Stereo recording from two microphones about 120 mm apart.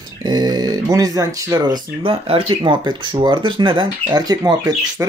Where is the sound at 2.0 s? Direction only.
50° right (ahead or behind).